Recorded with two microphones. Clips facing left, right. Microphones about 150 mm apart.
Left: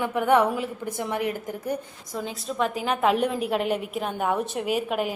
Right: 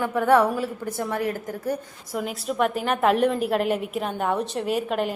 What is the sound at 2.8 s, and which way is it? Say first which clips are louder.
A woman's voice: right 2 dB; centre (ahead or behind).